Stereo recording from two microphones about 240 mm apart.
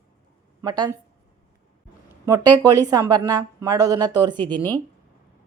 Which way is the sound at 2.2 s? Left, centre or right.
Centre.